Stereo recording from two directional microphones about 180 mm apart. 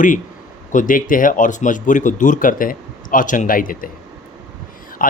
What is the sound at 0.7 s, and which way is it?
Speech, 45° left (ahead or behind).